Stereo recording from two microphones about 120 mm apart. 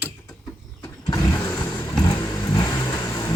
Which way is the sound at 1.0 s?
25° left (ahead or behind).